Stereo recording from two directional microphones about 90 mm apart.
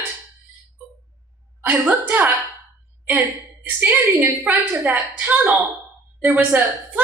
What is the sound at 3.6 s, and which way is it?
A woman's voice, 20° right (ahead or behind).